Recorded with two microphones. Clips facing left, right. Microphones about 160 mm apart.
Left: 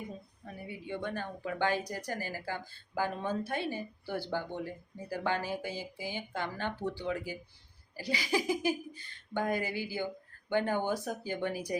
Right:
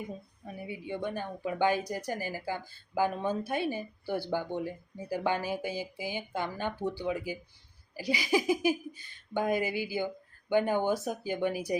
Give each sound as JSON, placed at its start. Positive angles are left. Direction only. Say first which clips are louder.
{"t": 0.4, "sound": "speech", "louder": "right 3 dB", "side_deg": -15}